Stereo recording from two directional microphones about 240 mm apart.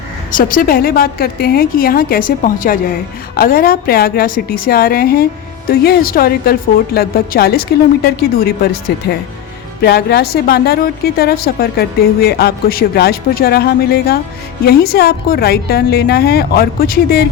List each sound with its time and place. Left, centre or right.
0.3 s a woman's voice: left